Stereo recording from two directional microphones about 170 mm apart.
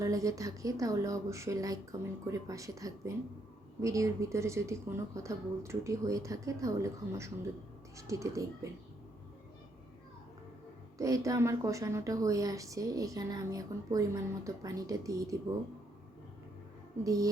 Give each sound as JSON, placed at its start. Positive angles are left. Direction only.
{"t": 0.0, "sound": "a woman's voice", "side_deg": -20}
{"t": 10.9, "sound": "a woman's voice", "side_deg": -20}
{"t": 17.0, "sound": "a woman's voice", "side_deg": -20}